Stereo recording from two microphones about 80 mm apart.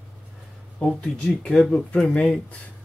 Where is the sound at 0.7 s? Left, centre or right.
Centre.